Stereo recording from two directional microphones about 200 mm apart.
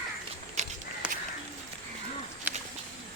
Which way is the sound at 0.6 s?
35° right (ahead or behind).